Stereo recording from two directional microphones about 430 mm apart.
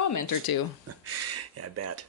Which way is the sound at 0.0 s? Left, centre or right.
Left.